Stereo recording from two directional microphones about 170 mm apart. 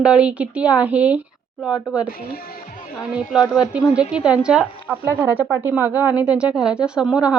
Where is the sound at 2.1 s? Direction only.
60° left (ahead or behind).